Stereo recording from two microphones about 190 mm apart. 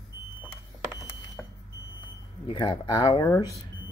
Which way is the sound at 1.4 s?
Centre (ahead or behind).